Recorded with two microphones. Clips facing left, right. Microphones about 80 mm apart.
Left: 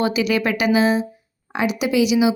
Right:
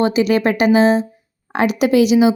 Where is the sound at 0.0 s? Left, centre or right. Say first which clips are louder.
Right 5 dB; right.